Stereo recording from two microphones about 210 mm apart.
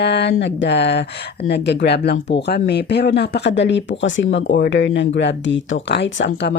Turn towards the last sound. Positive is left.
turn(degrees=55)  # may be behind; listen again after turning